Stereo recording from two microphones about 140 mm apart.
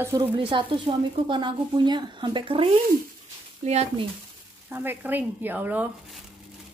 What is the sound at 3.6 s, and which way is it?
Speech, 50° right (ahead or behind).